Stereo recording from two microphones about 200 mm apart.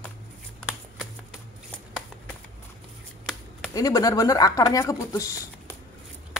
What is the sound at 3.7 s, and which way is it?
Speech, 15° left (ahead or behind).